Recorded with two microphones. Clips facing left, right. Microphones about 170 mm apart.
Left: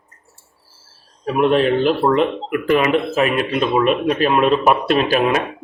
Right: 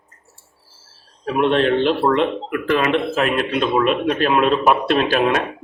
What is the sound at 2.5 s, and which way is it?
Speech, 20° left (ahead or behind).